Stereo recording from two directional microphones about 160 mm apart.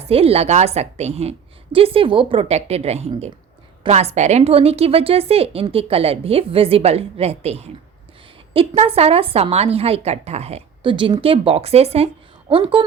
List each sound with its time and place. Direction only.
0.0 s a woman's voice: 40° right (ahead or behind)